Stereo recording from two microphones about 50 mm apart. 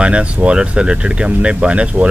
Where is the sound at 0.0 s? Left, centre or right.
Right.